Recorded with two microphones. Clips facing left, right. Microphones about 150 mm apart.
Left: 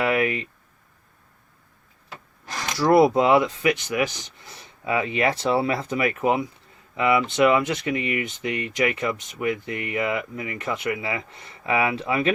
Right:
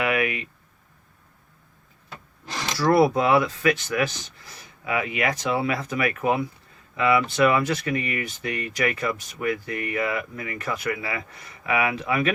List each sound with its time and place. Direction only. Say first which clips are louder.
0.0 s speech: left 2 dB; 30° left (ahead or behind)
2.7 s speech: left 2 dB; 20° left (ahead or behind)